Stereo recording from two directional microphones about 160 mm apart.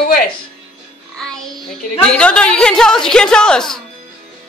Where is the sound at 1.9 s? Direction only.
5° left (ahead or behind).